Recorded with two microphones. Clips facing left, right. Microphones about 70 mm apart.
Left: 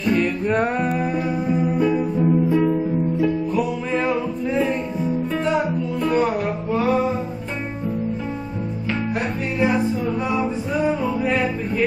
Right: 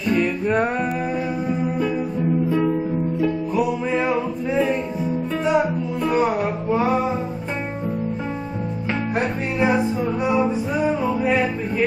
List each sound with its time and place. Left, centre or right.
0.1 s music: centre
9.1 s music: right
10.7 s music: centre